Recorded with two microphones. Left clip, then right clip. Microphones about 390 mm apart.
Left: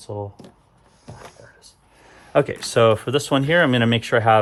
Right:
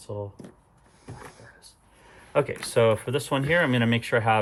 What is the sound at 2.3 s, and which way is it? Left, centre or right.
Speech, left.